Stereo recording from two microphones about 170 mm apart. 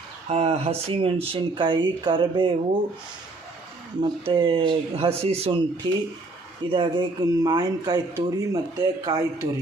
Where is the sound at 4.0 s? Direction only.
30° right (ahead or behind).